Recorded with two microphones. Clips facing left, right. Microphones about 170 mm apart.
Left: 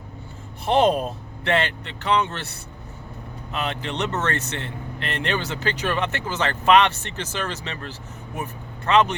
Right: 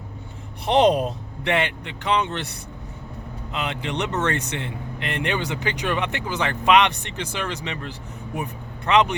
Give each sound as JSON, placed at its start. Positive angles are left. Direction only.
{"t": 0.6, "sound": "speech", "side_deg": -20}